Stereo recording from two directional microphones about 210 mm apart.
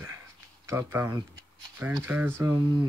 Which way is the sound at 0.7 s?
10° right (ahead or behind).